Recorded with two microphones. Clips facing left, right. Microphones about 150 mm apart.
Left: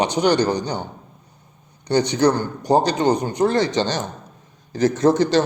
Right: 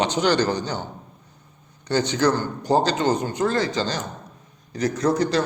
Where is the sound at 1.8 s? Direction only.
15° left (ahead or behind).